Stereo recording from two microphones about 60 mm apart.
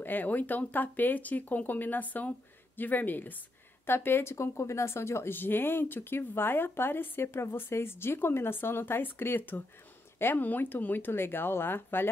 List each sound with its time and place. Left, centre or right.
0.0 s speech: left